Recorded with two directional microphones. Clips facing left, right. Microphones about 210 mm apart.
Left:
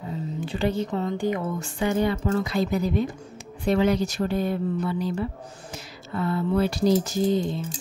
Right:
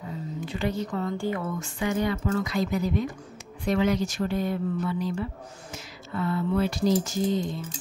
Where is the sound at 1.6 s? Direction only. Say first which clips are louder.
Left 4 dB; 30° left (ahead or behind).